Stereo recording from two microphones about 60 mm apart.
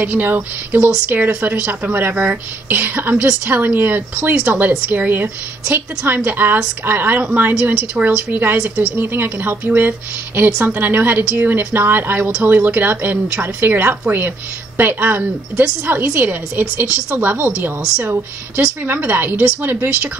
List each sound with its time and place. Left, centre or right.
0.0 s speech: right
7.7 s speech: centre
8.3 s speech: right
18.9 s speech: right